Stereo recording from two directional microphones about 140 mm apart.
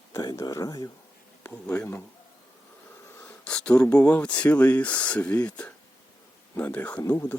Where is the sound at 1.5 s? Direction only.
10° left (ahead or behind).